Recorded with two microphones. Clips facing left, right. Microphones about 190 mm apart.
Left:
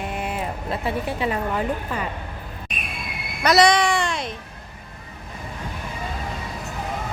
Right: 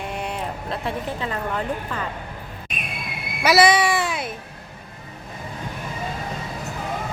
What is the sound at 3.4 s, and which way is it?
Speech, 5° right (ahead or behind).